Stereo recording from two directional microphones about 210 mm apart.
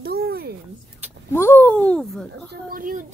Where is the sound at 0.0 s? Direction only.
50° right (ahead or behind).